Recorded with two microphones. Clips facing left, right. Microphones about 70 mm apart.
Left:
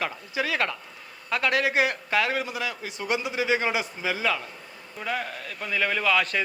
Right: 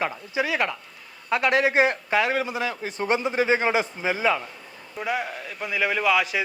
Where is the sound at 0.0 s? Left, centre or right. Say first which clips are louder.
Right 3 dB; right.